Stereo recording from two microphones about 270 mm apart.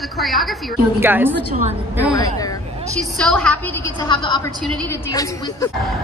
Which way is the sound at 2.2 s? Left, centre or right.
Centre.